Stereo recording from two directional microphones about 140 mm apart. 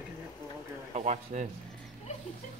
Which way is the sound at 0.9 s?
55° right (ahead or behind).